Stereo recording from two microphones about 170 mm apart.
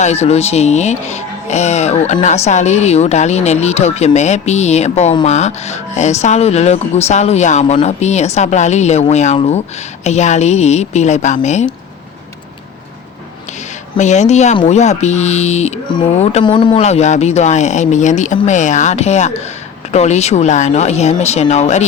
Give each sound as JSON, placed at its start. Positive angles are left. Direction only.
{"t": 0.0, "sound": "speech", "side_deg": 40}
{"t": 13.9, "sound": "speech", "side_deg": 45}
{"t": 16.4, "sound": "speech", "side_deg": 25}
{"t": 16.8, "sound": "speech", "side_deg": 40}